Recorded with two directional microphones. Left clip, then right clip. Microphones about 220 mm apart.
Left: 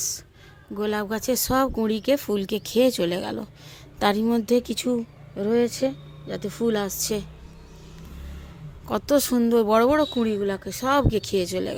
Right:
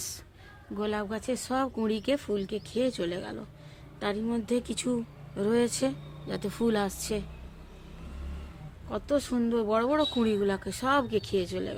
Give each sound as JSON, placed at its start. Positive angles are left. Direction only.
{"t": 0.8, "sound": "speech", "side_deg": 15}
{"t": 8.9, "sound": "speech", "side_deg": 30}
{"t": 10.2, "sound": "speech", "side_deg": 10}